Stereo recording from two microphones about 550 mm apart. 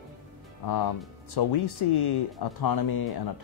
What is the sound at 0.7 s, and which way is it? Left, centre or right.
Speech, left.